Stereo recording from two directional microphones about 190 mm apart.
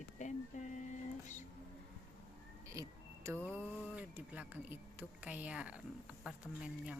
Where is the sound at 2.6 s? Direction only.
15° right (ahead or behind).